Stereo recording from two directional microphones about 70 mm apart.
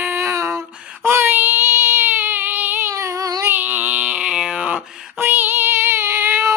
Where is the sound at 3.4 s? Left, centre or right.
Right.